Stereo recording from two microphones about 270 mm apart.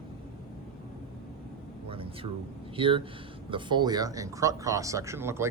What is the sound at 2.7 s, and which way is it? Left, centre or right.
Speech, centre.